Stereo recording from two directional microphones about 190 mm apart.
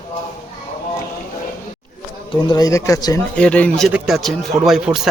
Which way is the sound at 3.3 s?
5° left (ahead or behind).